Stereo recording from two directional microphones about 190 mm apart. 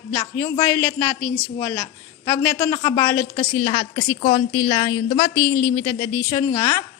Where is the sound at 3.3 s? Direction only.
30° left (ahead or behind).